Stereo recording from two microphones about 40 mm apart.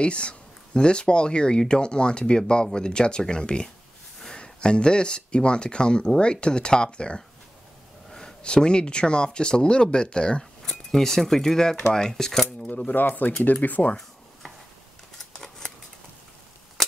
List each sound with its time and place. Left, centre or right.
0.0 s speech: left
8.1 s a sound: centre
8.6 s speech: left
10.6 s speech: centre
12.4 s speech: left
15.3 s scissors: centre